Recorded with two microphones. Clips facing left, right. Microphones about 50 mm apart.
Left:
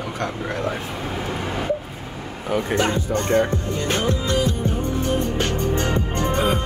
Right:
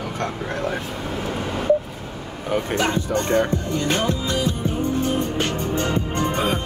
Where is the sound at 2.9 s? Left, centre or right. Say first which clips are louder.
Even; right.